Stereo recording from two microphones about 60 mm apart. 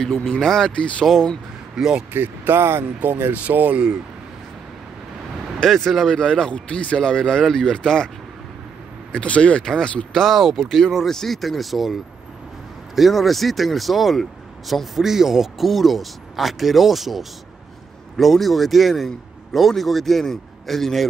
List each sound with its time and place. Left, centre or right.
0.0 s a man's voice: centre
1.0 s a man's voice: centre
1.8 s speech: centre
2.1 s speech: right
5.6 s speech: centre
9.1 s speech: centre
10.1 s a man's voice: centre